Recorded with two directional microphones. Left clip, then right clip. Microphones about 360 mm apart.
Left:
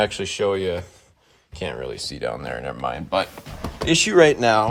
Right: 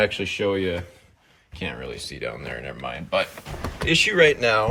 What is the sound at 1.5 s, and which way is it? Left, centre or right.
Speech, centre.